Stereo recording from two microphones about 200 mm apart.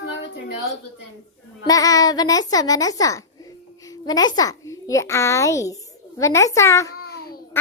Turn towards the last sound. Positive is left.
turn(degrees=15)  # may be behind; listen again after turning